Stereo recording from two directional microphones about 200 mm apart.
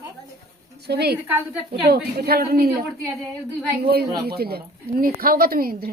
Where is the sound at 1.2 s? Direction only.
10° right (ahead or behind).